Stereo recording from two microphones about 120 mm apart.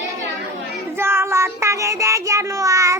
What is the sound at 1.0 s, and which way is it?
Child singing, 20° right (ahead or behind).